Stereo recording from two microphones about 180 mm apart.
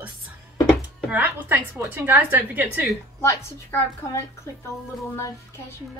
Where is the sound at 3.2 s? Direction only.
15° left (ahead or behind).